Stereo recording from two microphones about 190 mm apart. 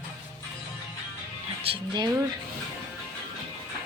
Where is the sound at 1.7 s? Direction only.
25° right (ahead or behind).